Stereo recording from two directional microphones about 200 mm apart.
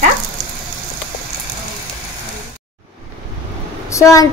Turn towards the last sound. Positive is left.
turn(degrees=15)  # may be behind; listen again after turning